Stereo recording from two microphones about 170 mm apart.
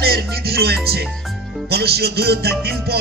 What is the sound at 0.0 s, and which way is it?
Music, 65° right (ahead or behind).